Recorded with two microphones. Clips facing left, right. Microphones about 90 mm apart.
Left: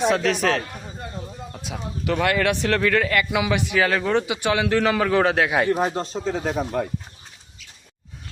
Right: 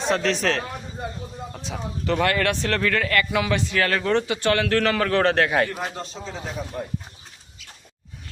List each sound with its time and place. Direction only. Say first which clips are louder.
0.1 s a man's voice: left 2 dB; 5° left (ahead or behind)
5.8 s speech: left 7 dB; 35° left (ahead or behind)
6.2 s speech: left 9 dB; 50° left (ahead or behind)